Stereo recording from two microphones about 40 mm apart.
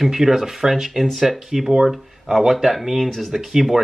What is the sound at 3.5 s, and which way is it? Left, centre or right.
Speech, centre.